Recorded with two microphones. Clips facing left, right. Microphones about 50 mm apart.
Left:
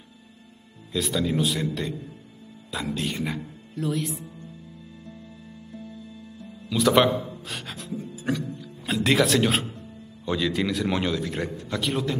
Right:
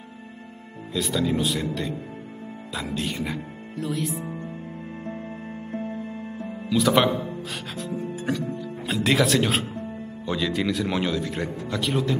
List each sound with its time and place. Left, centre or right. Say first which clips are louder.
0.9 s speech: right 1 dB; centre
4.3 s music: right 9 dB; right
6.7 s speech: even; centre